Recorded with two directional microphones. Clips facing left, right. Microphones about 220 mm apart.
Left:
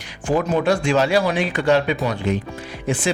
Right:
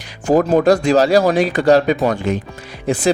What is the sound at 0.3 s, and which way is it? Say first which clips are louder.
Speech: right 6 dB; 40° right (ahead or behind).